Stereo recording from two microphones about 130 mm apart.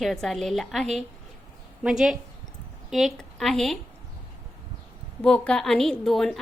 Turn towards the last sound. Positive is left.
turn(degrees=0)  # may be behind; listen again after turning